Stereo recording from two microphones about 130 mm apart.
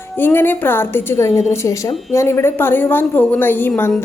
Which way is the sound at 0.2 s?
15° left (ahead or behind).